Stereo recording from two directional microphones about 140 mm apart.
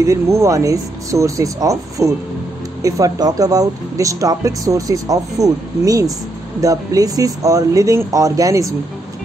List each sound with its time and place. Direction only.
0.0 s speech: 20° right (ahead or behind)